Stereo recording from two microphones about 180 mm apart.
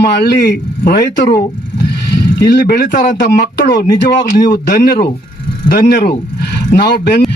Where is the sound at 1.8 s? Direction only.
60° left (ahead or behind).